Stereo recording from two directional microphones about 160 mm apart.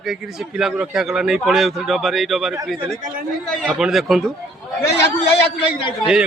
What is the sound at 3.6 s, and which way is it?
Speech, 5° right (ahead or behind).